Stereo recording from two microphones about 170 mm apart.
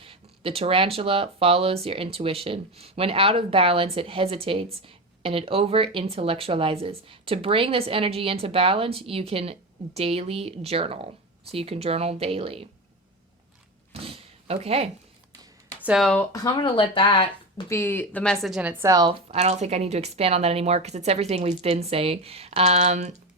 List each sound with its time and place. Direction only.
0.0 s speech: 35° right (ahead or behind)
13.9 s a sound: 35° right (ahead or behind)
15.8 s speech: 5° right (ahead or behind)
16.3 s speech: 25° left (ahead or behind)
17.7 s speech: 15° left (ahead or behind)
18.4 s a woman's voice: 5° right (ahead or behind); by 19.1 s 20° right (ahead or behind)
19.3 s speech: 40° right (ahead or behind)